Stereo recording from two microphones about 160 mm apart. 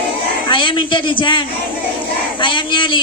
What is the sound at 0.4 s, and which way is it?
A woman's voice, 30° left (ahead or behind).